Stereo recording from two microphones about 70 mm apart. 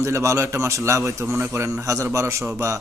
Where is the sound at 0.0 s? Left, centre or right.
Right.